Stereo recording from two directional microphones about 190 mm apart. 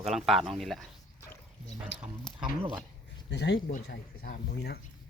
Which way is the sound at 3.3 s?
65° left (ahead or behind).